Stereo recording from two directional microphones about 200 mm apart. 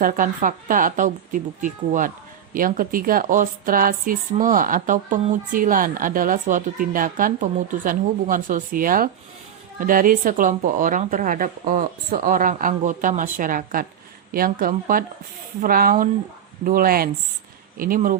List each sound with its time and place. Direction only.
0.0 s speech: 40° right (ahead or behind)